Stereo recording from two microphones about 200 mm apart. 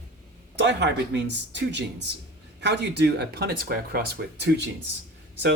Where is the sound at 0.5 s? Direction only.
60° right (ahead or behind).